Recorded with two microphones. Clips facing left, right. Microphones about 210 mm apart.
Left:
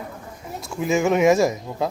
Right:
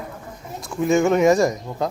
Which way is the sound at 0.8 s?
5° left (ahead or behind).